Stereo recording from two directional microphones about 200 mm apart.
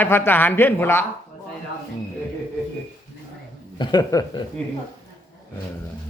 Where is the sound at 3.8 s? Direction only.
20° left (ahead or behind).